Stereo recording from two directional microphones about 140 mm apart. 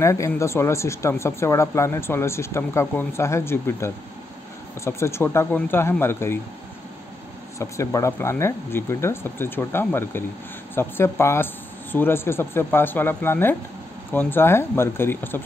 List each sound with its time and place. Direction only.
0.0 s speech: 20° left (ahead or behind)
7.5 s speech: 20° left (ahead or behind)